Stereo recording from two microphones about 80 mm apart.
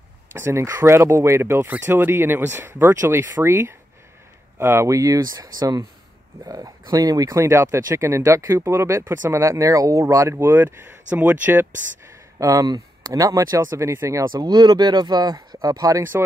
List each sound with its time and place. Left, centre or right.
0.3 s speech: right
12.4 s speech: right
14.3 s speech: right